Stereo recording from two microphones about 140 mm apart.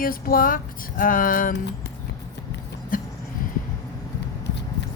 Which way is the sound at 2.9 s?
80° left.